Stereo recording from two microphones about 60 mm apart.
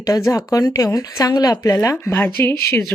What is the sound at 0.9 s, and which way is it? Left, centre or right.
Speech, left.